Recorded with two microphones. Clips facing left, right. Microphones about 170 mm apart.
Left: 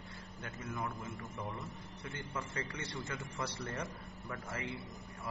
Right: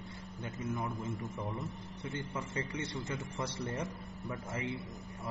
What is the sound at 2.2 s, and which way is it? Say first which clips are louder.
A man's voice: right 2 dB; 20° right (ahead or behind).